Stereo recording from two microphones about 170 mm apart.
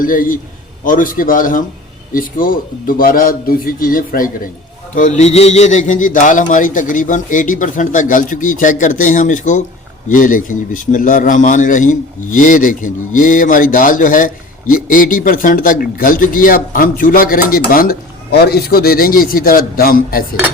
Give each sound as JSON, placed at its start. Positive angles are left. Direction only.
{"t": 0.0, "sound": "a man's voice", "side_deg": 55}